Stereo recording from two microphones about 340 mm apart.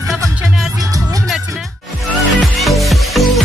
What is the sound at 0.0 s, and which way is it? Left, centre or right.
Music, centre.